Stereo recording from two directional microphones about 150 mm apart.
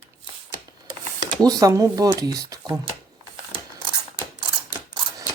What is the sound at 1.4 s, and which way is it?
Speech, 25° right (ahead or behind).